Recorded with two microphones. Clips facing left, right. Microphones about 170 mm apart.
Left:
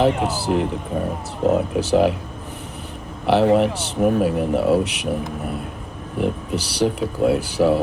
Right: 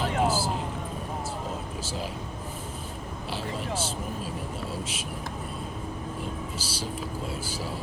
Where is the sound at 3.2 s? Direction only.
70° left (ahead or behind).